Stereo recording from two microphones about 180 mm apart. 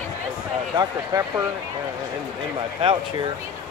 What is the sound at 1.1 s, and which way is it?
Speech, 20° right (ahead or behind).